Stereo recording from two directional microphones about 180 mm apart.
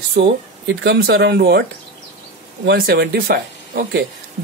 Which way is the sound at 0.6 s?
70° right (ahead or behind).